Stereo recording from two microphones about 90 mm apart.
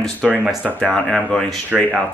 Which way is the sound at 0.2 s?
Centre (ahead or behind).